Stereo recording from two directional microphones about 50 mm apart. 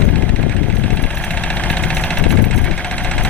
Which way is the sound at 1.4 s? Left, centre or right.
Centre.